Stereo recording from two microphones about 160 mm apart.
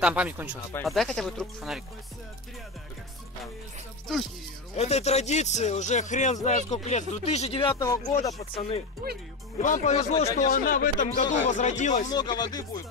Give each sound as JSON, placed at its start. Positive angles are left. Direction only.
{"t": 0.0, "sound": "speech", "side_deg": -10}
{"t": 0.8, "sound": "speech", "side_deg": 0}
{"t": 4.7, "sound": "a man's voice", "side_deg": 45}
{"t": 7.8, "sound": "speech", "side_deg": 20}
{"t": 8.4, "sound": "speech", "side_deg": 40}
{"t": 9.6, "sound": "a man's voice", "side_deg": 50}
{"t": 12.1, "sound": "speech", "side_deg": 25}